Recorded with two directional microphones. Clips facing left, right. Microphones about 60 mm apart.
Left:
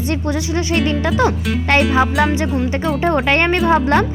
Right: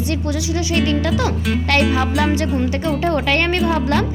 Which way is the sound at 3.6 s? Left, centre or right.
Left.